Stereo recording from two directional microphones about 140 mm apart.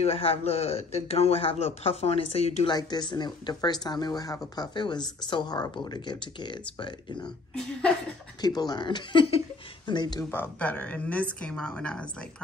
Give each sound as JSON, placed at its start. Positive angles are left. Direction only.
{"t": 0.0, "sound": "a man's voice", "side_deg": 45}
{"t": 2.7, "sound": "speech", "side_deg": 30}
{"t": 8.4, "sound": "speech", "side_deg": 30}
{"t": 10.3, "sound": "speech", "side_deg": 10}